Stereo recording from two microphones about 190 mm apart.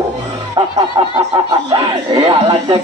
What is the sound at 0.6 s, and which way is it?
Speech, 25° right (ahead or behind).